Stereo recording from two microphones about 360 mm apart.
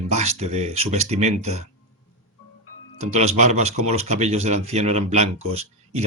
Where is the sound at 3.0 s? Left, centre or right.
Centre.